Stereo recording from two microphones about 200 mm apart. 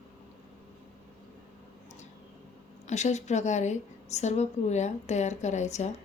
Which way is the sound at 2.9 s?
35° left (ahead or behind).